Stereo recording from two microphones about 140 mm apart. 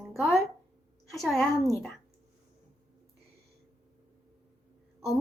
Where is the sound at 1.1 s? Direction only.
Centre (ahead or behind).